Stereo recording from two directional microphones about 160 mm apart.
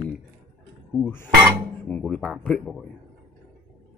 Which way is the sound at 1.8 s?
5° left (ahead or behind).